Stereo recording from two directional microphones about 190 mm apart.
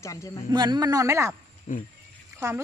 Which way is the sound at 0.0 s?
15° left (ahead or behind).